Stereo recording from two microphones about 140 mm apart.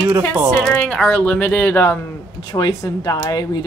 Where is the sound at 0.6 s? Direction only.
5° left (ahead or behind).